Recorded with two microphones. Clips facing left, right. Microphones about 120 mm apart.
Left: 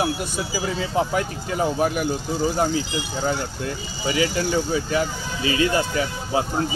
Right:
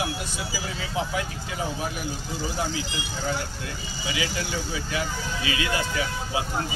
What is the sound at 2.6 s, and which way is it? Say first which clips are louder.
Speech: left 7 dB; 40° left (ahead or behind).